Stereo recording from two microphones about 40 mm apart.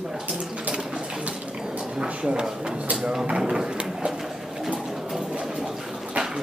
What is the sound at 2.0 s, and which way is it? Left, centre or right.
Speech, right.